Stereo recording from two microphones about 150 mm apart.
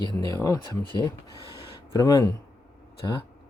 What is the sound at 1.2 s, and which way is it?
Speech, 25° right (ahead or behind).